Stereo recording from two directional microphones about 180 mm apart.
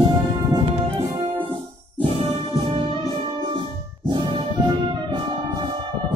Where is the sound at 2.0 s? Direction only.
30° right (ahead or behind).